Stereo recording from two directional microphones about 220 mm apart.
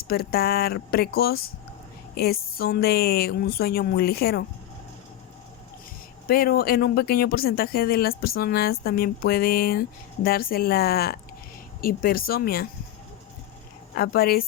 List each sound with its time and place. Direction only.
0.1 s a woman's voice: 45° left (ahead or behind)
6.2 s a woman's voice: 40° left (ahead or behind)
13.9 s a woman's voice: 45° left (ahead or behind)